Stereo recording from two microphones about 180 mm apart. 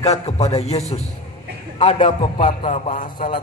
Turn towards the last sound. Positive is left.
turn(degrees=45)  # may be behind; listen again after turning